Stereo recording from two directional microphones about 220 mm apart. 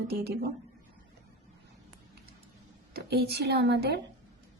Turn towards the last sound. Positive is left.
turn(degrees=-45)  # may be behind; listen again after turning